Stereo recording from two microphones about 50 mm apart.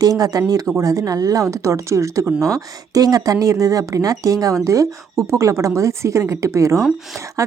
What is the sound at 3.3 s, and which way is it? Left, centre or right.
A woman's voice, right.